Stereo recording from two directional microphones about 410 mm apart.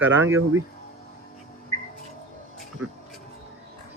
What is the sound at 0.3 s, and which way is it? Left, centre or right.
Speech, right.